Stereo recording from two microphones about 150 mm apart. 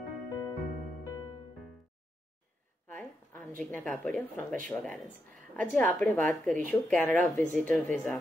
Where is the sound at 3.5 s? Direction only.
5° left (ahead or behind).